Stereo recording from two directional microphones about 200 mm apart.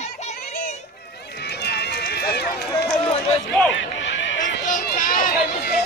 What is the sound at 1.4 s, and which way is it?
Run, 55° left (ahead or behind).